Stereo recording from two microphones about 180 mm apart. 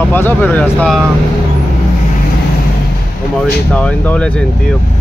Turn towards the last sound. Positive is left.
turn(degrees=5)  # may be behind; listen again after turning